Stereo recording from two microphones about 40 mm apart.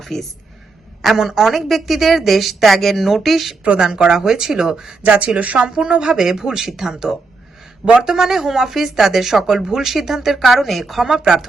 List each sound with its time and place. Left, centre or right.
0.0 s speech: centre
1.0 s a woman's voice: centre
3.8 s speech: centre
5.0 s speech: right
5.6 s speech: right; by 11.1 s centre
11.1 s speech: centre